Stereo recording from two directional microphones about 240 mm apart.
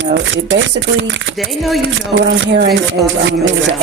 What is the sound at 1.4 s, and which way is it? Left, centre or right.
Speech, centre.